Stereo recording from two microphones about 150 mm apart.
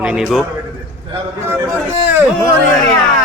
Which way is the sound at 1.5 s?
15° right (ahead or behind).